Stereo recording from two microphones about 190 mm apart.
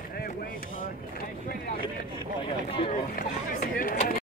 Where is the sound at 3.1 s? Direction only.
45° left (ahead or behind).